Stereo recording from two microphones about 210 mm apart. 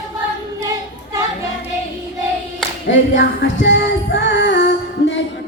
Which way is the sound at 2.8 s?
60° left (ahead or behind).